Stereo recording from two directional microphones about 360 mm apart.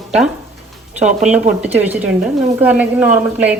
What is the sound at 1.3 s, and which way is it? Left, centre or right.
A woman's voice, centre.